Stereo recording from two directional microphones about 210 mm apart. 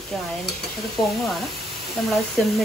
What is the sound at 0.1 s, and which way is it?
Dishes, centre (ahead or behind).